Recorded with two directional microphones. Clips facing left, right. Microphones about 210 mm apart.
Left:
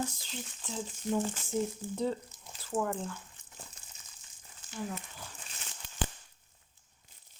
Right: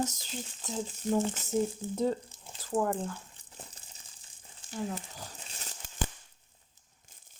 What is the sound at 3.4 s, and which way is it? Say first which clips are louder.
Crumpling: right 2 dB; 35° right (ahead or behind).